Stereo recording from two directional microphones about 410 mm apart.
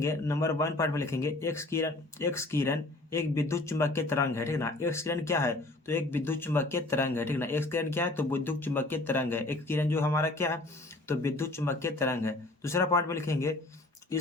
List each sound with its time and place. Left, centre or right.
0.0 s speech: centre